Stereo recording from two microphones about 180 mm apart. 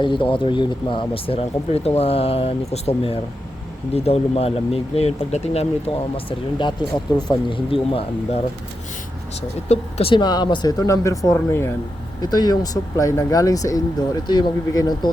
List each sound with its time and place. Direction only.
0.0 s speech: 25° left (ahead or behind)
9.6 s speech: 30° left (ahead or behind)